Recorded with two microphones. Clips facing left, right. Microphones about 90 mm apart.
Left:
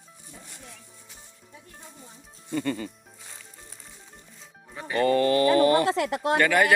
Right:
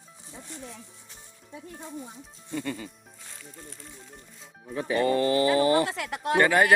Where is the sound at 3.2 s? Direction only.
5° left (ahead or behind).